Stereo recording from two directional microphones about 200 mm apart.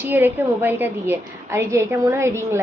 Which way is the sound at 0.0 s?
10° right (ahead or behind).